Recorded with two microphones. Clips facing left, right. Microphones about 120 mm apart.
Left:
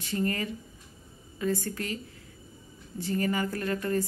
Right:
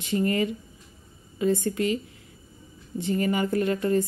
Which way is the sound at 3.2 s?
20° right (ahead or behind).